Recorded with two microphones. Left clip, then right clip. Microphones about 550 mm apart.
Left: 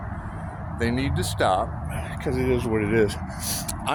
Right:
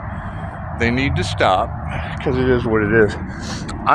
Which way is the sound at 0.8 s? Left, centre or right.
Left.